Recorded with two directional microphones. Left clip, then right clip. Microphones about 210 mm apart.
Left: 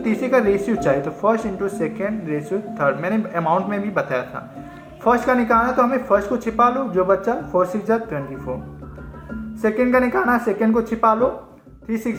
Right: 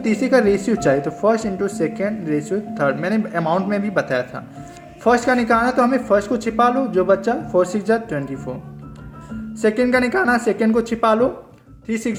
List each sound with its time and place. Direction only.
0.3 s speech: 55° right (ahead or behind)
9.6 s speech: 50° right (ahead or behind)